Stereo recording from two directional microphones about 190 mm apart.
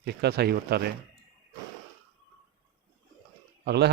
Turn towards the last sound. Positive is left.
turn(degrees=-60)  # may be behind; listen again after turning